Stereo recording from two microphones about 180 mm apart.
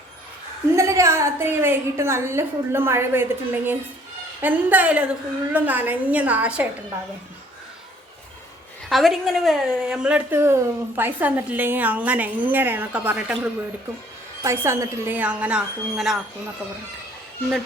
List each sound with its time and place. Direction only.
0.8 s a woman's voice: 15° right (ahead or behind)
8.9 s a woman's voice: centre (ahead or behind)